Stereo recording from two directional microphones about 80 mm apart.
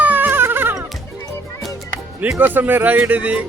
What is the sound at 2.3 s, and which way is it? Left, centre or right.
Speech, right.